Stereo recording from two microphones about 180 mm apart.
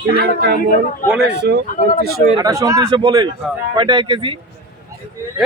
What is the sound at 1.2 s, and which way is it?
Speech, 70° right (ahead or behind).